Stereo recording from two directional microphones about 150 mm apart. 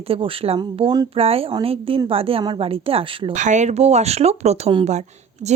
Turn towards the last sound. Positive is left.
turn(degrees=-50)  # may be behind; listen again after turning